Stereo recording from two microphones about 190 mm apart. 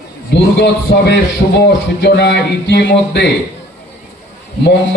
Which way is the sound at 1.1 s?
65° left (ahead or behind).